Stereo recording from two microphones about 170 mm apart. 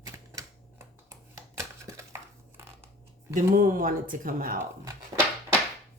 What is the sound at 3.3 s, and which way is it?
Speech, 55° right (ahead or behind).